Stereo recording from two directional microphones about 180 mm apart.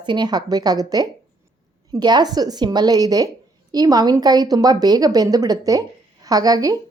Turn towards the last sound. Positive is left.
turn(degrees=-20)  # may be behind; listen again after turning